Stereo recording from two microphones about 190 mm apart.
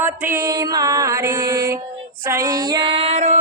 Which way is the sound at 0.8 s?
20° right (ahead or behind).